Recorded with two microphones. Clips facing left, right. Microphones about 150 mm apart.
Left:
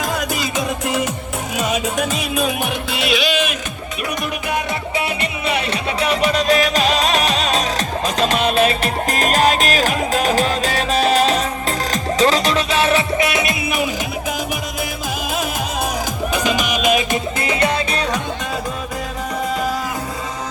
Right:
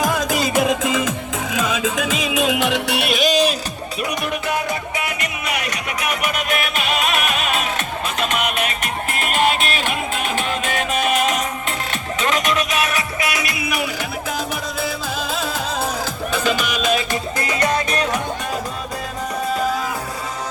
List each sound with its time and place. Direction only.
0.5 s music: 90° right; by 3.1 s 70° right (ahead or behind)
3.1 s music: 45° right (ahead or behind)
4.9 s music: 30° left (ahead or behind)
16.3 s music: 15° left (ahead or behind)